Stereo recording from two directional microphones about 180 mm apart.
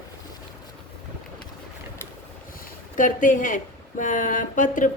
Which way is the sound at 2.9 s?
45° left (ahead or behind).